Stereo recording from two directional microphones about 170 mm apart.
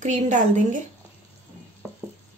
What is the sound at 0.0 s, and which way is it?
Speech, 45° right (ahead or behind).